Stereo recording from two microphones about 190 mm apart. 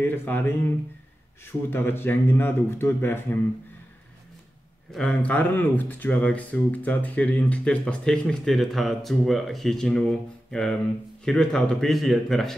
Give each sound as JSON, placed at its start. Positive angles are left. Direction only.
{"t": 0.0, "sound": "speech", "side_deg": 10}
{"t": 4.9, "sound": "speech", "side_deg": 5}
{"t": 11.2, "sound": "speech", "side_deg": 5}